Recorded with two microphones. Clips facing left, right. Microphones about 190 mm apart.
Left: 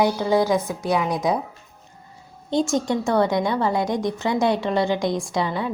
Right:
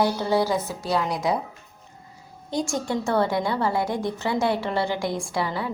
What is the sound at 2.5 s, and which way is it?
A woman's voice, 20° left (ahead or behind).